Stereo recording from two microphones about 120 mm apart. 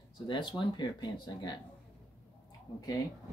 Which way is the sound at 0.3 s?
40° left (ahead or behind).